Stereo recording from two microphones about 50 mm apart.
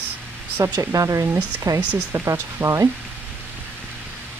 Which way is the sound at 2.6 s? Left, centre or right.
Right.